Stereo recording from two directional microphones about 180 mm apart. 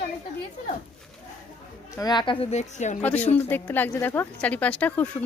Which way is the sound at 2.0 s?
25° left (ahead or behind).